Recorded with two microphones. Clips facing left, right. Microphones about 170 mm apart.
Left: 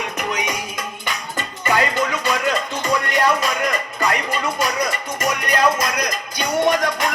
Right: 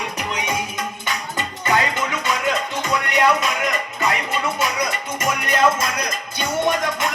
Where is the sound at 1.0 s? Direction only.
20° right (ahead or behind).